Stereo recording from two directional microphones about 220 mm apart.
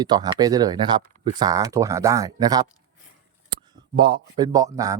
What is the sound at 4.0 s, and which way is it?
A man's voice, 20° right (ahead or behind).